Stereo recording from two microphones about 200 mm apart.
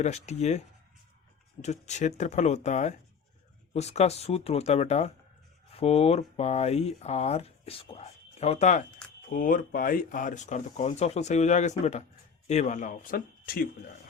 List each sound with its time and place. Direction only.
0.0 s speech: 35° left (ahead or behind)
1.6 s speech: 35° left (ahead or behind)